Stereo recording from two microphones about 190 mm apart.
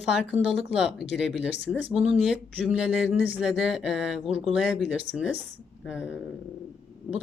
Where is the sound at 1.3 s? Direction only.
65° left (ahead or behind).